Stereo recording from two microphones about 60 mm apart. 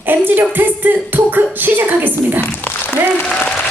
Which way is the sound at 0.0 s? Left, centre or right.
Right.